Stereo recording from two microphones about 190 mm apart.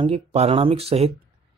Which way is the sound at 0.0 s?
30° right (ahead or behind).